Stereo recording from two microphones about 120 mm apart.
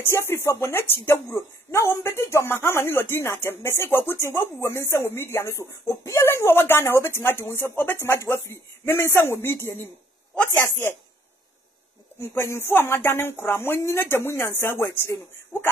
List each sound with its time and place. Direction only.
0.0 s a woman's voice: 20° left (ahead or behind)
12.2 s a woman's voice: 20° left (ahead or behind)